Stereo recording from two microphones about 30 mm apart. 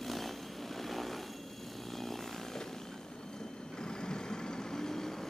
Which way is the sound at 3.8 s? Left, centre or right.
Left.